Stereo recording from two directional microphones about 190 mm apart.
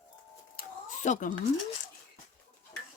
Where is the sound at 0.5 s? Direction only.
40° left (ahead or behind).